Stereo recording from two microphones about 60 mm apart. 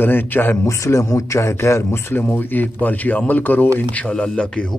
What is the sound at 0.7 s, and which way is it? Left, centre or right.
Speech, left.